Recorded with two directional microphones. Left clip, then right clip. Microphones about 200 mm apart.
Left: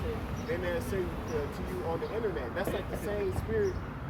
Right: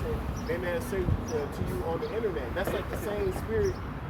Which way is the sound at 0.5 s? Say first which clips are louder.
Right 2 dB; centre (ahead or behind).